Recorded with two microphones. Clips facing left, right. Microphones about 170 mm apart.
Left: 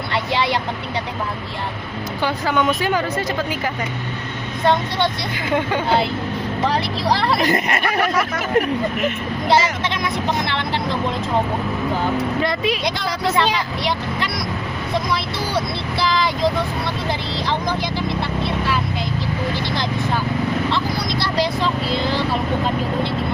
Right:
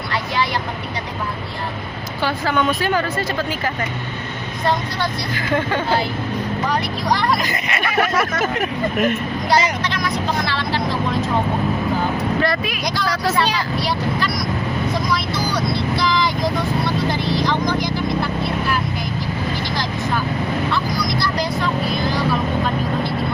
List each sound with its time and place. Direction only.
0.1 s vehicle: 25° left (ahead or behind)
2.2 s a woman's voice: 20° left (ahead or behind)
5.5 s a woman's voice: 20° left (ahead or behind)
6.7 s speech: 30° left (ahead or behind)
7.5 s speech: 50° left (ahead or behind)
9.8 s speech: 20° left (ahead or behind)
12.4 s speech: 25° left (ahead or behind)
15.5 s speech: 25° left (ahead or behind)
20.7 s speech: 25° left (ahead or behind)